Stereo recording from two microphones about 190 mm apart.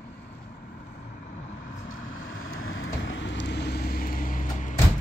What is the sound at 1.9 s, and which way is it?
Vehicle, 90° left.